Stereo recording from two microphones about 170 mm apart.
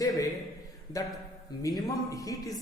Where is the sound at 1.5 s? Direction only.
25° left (ahead or behind).